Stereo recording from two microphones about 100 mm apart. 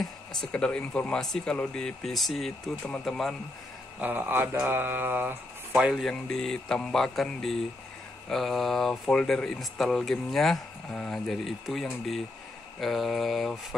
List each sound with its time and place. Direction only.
0.4 s speech: 10° left (ahead or behind)
4.0 s a sound: 20° right (ahead or behind)
5.7 s speech: 5° right (ahead or behind)